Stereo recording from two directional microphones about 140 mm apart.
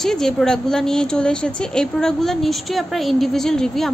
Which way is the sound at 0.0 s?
5° left (ahead or behind).